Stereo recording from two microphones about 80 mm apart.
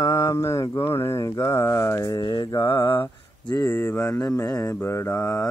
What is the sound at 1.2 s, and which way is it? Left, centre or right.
Mantra, left.